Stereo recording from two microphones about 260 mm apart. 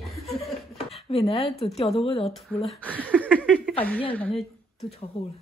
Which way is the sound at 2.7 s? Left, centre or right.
Centre.